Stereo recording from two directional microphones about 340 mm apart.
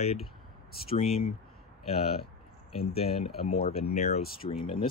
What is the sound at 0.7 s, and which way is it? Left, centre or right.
Speech, left.